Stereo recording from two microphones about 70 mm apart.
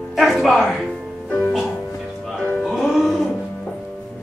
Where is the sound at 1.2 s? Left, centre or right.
Left.